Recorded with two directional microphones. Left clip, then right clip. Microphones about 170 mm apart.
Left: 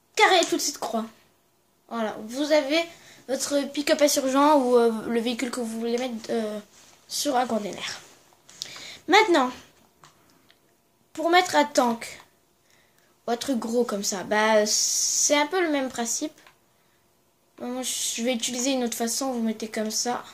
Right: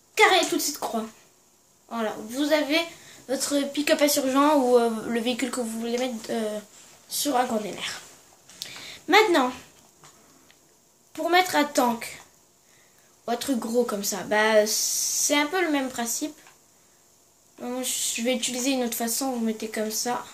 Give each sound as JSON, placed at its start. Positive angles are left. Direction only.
{"t": 0.1, "sound": "a woman's voice", "side_deg": 40}
{"t": 8.5, "sound": "a sound", "side_deg": 35}
{"t": 11.1, "sound": "speech", "side_deg": 35}
{"t": 13.2, "sound": "speech", "side_deg": 35}
{"t": 17.6, "sound": "speech", "side_deg": 35}